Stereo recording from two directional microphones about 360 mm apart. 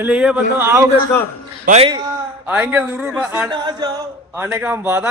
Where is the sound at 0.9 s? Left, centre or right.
Centre.